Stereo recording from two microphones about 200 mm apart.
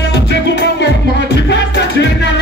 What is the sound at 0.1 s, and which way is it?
Music, 60° left (ahead or behind).